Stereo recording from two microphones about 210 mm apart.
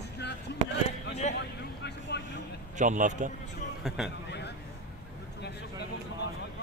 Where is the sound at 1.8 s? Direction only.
55° left (ahead or behind).